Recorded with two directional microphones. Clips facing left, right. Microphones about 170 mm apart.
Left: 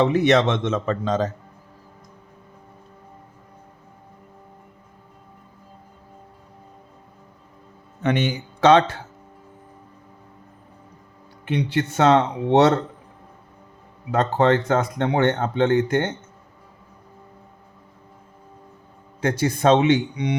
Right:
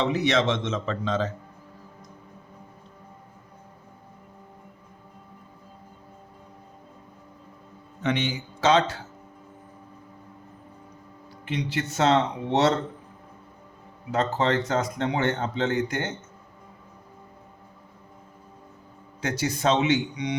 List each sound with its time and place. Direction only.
0.0 s speech: 55° left (ahead or behind)
8.0 s speech: 55° left (ahead or behind)
11.4 s speech: 60° left (ahead or behind)
14.1 s speech: 60° left (ahead or behind)
19.2 s speech: 55° left (ahead or behind)